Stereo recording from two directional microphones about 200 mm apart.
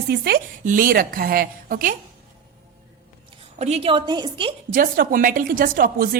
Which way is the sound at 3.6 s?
35° right (ahead or behind).